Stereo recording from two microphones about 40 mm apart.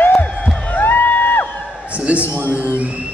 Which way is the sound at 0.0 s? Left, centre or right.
Left.